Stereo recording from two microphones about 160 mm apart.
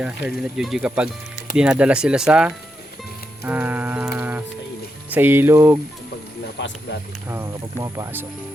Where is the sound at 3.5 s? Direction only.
10° right (ahead or behind).